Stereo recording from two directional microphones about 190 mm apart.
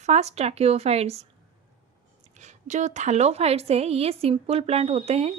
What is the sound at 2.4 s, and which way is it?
A woman's voice, 40° right (ahead or behind).